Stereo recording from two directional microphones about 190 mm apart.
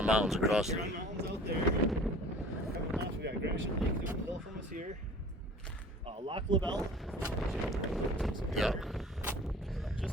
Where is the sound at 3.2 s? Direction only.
65° right (ahead or behind).